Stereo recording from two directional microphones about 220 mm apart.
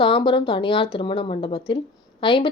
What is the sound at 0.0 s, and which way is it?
A woman's voice, 20° left (ahead or behind).